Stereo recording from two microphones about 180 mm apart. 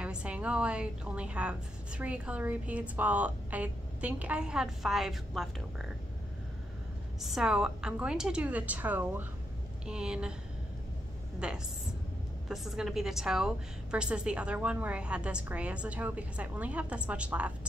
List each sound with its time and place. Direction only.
0.0 s a woman's voice: 5° right (ahead or behind)
7.2 s a woman's voice: centre (ahead or behind)
11.3 s a woman's voice: 5° right (ahead or behind)